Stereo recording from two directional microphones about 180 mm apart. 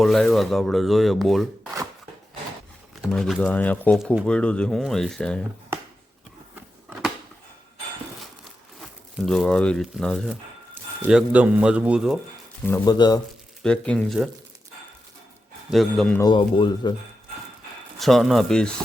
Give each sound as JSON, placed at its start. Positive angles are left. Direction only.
{"t": 0.0, "sound": "speech", "side_deg": 0}
{"t": 2.9, "sound": "speech", "side_deg": 0}
{"t": 9.1, "sound": "speech", "side_deg": 0}
{"t": 11.1, "sound": "speech", "side_deg": -5}
{"t": 12.6, "sound": "speech", "side_deg": 20}
{"t": 13.6, "sound": "speech", "side_deg": 5}
{"t": 15.7, "sound": "speech", "side_deg": 0}
{"t": 16.1, "sound": "speech", "side_deg": 25}
{"t": 18.0, "sound": "speech", "side_deg": 0}